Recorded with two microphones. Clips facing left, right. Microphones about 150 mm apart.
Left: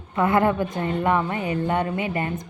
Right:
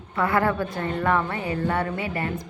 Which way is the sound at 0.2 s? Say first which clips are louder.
Left 3 dB; 20° left (ahead or behind).